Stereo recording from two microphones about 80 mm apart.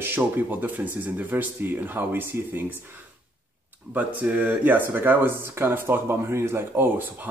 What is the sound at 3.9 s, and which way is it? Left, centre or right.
Speech, right.